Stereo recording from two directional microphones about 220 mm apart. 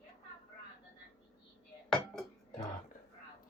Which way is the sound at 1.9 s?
Centre (ahead or behind).